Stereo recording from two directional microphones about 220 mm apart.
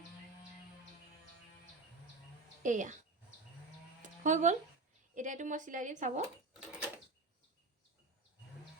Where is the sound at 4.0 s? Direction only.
35° right (ahead or behind).